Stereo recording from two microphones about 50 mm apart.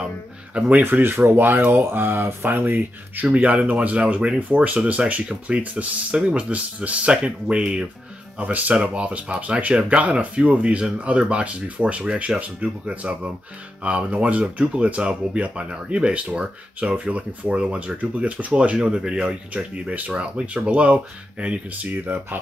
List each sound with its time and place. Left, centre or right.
0.6 s speech: right
0.9 s speech: right
3.3 s speech: right
8.4 s speech: right
18.9 s speech: centre
19.5 s speech: right
20.1 s speech: centre
22.0 s speech: right